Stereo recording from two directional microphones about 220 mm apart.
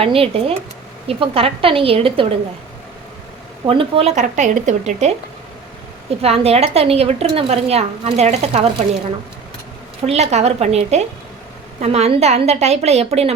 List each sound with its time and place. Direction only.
0.0 s a woman's voice: 25° right (ahead or behind)
3.7 s speech: 25° right (ahead or behind)
6.2 s a woman's voice: 25° right (ahead or behind)
10.1 s a woman's voice: 30° right (ahead or behind)